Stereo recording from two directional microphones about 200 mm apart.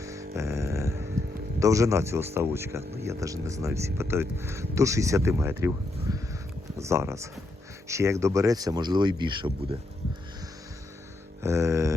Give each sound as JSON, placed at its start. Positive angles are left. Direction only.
{"t": 0.0, "sound": "a sound", "side_deg": -15}
{"t": 1.5, "sound": "speech", "side_deg": -15}
{"t": 11.4, "sound": "speech", "side_deg": -15}